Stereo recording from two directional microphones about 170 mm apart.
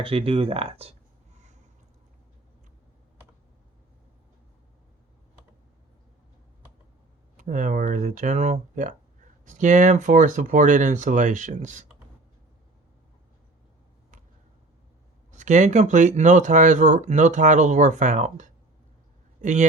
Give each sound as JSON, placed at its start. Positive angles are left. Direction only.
{"t": 0.0, "sound": "speech", "side_deg": -30}
{"t": 7.3, "sound": "speech", "side_deg": -50}
{"t": 15.3, "sound": "speech", "side_deg": -45}